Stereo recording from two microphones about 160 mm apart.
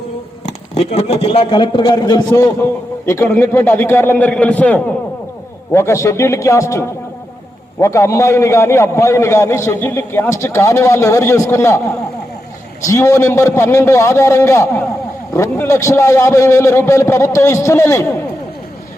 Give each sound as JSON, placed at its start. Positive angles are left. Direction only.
{"t": 0.4, "sound": "a man's voice", "side_deg": 40}
{"t": 12.8, "sound": "a man's voice", "side_deg": 20}